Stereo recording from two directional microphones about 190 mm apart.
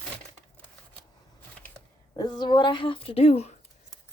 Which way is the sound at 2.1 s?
20° left (ahead or behind).